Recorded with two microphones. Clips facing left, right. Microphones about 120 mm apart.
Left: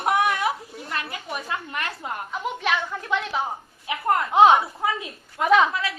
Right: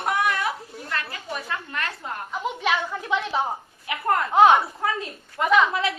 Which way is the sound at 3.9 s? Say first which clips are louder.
Even; 20° left (ahead or behind).